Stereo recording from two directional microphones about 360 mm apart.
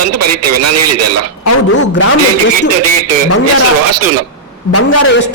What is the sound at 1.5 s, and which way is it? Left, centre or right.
Speech, left.